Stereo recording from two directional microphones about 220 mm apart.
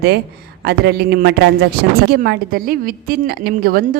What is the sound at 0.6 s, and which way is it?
Speech, 45° right (ahead or behind).